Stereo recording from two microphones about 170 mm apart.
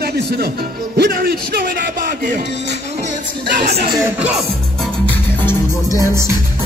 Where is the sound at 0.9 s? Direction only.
70° right (ahead or behind).